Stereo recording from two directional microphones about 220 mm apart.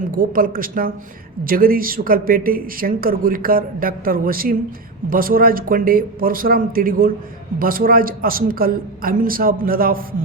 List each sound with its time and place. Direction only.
0.2 s speech: 40° right (ahead or behind)